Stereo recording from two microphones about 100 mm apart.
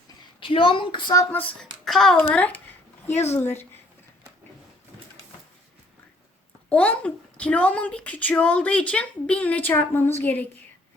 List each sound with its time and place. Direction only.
0.3 s a woman's voice: 60° left (ahead or behind)
1.8 s a child's voice: centre (ahead or behind)
2.3 s a sound: 15° left (ahead or behind)
3.3 s speech: 20° left (ahead or behind)
6.7 s a child's voice: 15° left (ahead or behind)